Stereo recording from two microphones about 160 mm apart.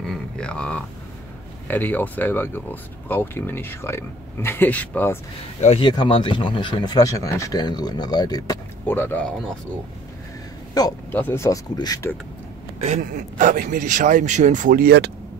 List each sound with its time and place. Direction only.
0.0 s a sound: 5° left (ahead or behind)
1.7 s speech: 10° left (ahead or behind)
5.8 s speech: 30° left (ahead or behind)
8.8 s speech: 10° left (ahead or behind)
10.8 s speech: 25° left (ahead or behind)
11.1 s speech: 15° left (ahead or behind)
12.8 s a man's voice: 50° right (ahead or behind); by 15.0 s 70° right (ahead or behind)